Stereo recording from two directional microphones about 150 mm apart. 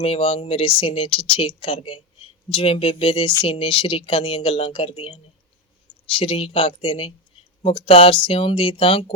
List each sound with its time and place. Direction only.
0.0 s speech: 40° left (ahead or behind)